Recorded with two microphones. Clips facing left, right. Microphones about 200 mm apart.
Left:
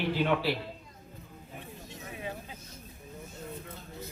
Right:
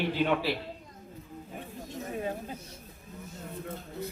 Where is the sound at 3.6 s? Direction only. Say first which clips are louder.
Right 6 dB; 55° right (ahead or behind).